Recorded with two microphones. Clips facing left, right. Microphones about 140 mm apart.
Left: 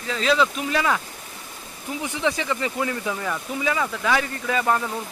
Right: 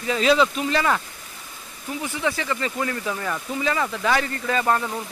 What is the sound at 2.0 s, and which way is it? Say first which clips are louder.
Speech: left 1 dB; 20° left (ahead or behind).